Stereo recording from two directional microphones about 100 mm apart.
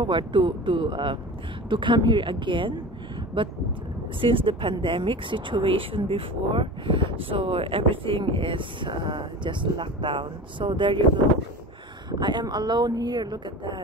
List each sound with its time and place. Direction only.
0.0 s speech: 55° right (ahead or behind)
12.1 s speech: 50° right (ahead or behind)